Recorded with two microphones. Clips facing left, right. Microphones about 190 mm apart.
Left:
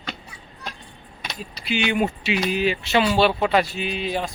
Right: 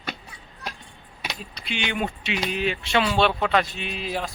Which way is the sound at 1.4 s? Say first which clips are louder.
Left 8 dB; 5° left (ahead or behind).